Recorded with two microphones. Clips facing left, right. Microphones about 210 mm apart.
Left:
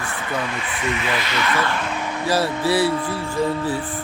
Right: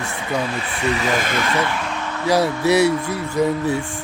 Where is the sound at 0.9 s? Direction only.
40° right (ahead or behind).